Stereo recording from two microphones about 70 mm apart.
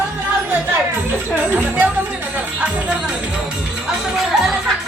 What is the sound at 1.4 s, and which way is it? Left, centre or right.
Music, right.